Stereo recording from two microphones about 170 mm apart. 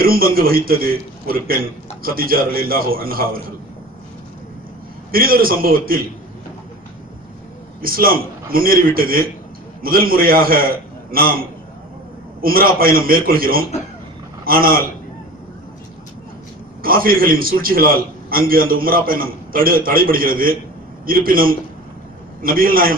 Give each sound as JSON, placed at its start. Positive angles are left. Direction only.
{"t": 0.0, "sound": "a man's voice", "side_deg": -60}
{"t": 5.1, "sound": "a man's voice", "side_deg": -60}
{"t": 7.8, "sound": "a man's voice", "side_deg": -60}
{"t": 12.4, "sound": "a man's voice", "side_deg": -60}
{"t": 16.8, "sound": "a man's voice", "side_deg": -60}